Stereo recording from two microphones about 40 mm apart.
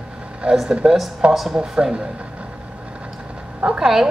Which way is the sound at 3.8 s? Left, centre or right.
Centre.